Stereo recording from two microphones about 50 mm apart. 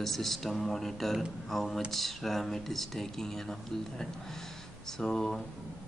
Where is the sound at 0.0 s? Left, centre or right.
Centre.